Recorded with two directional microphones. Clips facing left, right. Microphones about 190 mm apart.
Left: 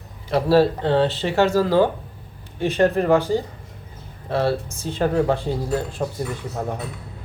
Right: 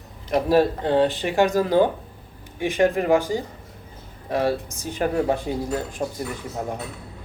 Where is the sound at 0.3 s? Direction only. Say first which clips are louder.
Left 2 dB; 15° right (ahead or behind).